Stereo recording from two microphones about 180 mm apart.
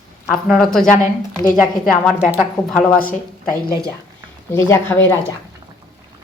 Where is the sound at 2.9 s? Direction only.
50° left (ahead or behind).